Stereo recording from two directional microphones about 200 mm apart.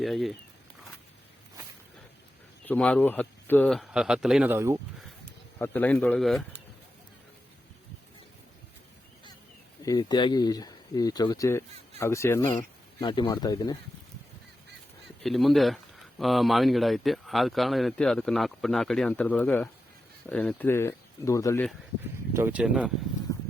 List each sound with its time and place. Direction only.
0.0 s speech: centre (ahead or behind)
2.6 s speech: 5° left (ahead or behind); by 4.8 s 10° right (ahead or behind)
5.5 s speech: 10° left (ahead or behind)
9.8 s speech: 20° left (ahead or behind)
13.0 s speech: 25° left (ahead or behind)
15.2 s speech: centre (ahead or behind)
22.3 s speech: 10° right (ahead or behind)